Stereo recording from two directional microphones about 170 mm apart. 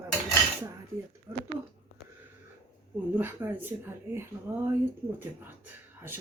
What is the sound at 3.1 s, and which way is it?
Speech, 10° right (ahead or behind).